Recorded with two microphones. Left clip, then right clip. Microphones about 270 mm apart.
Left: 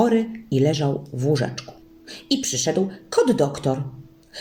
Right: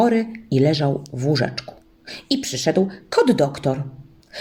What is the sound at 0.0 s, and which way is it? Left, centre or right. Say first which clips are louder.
Speech: right 1 dB; right.